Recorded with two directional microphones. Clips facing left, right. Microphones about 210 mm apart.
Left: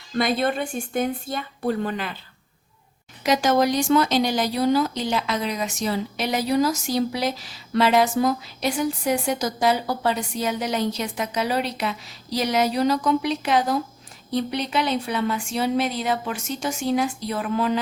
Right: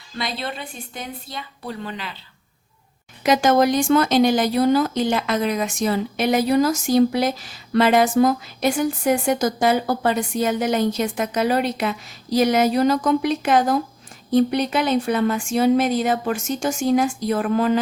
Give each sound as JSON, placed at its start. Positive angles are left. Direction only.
{"t": 0.2, "sound": "a woman's voice", "side_deg": 50}
{"t": 3.2, "sound": "speech", "side_deg": -55}